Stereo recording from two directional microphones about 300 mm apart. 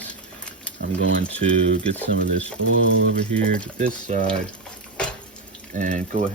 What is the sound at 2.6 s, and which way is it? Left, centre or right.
Speech, right.